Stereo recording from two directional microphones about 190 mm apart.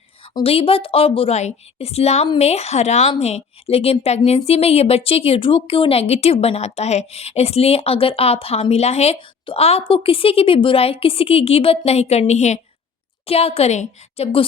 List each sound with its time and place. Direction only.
0.3 s a woman's voice: 30° left (ahead or behind)